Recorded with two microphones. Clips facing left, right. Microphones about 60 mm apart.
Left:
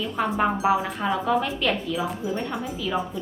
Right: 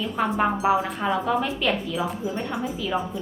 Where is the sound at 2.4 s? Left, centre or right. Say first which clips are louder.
Right 1 dB; centre.